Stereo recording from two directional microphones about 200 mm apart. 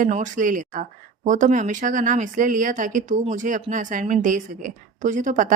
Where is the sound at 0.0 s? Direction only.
40° right (ahead or behind).